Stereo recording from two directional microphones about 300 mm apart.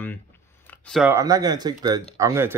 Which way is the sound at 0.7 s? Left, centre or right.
Centre.